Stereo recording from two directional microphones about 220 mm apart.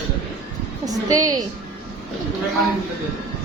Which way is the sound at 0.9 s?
15° right (ahead or behind).